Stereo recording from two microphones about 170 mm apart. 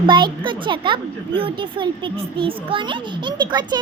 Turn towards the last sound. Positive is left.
turn(degrees=-25)  # may be behind; listen again after turning